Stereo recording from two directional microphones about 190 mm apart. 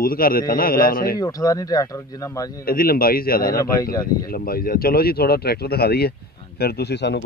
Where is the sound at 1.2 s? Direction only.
20° left (ahead or behind).